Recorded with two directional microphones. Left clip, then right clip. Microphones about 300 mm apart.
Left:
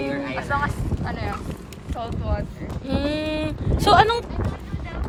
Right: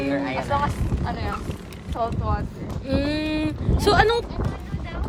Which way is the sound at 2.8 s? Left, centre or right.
Centre.